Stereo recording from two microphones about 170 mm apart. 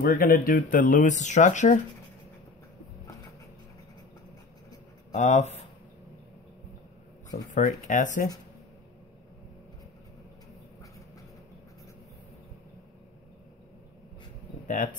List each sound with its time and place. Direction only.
0.0 s speech: 55° left (ahead or behind)
5.1 s speech: 45° left (ahead or behind)
7.2 s speech: 45° left (ahead or behind)